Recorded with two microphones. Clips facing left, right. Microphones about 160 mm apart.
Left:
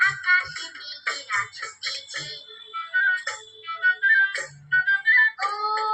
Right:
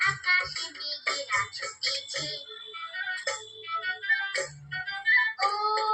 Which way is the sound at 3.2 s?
30° right (ahead or behind).